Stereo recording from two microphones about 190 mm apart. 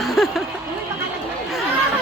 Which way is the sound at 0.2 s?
Centre (ahead or behind).